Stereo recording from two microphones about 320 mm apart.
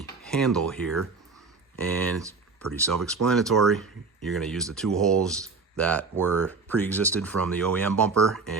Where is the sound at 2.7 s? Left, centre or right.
Centre.